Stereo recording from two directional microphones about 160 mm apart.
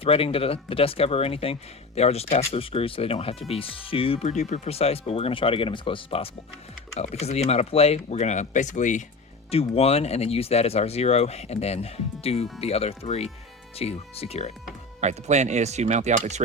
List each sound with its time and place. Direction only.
0.0 s speech: 35° left (ahead or behind)
4.3 s speech: 45° left (ahead or behind)
9.5 s speech: 40° left (ahead or behind)
15.0 s speech: 45° right (ahead or behind)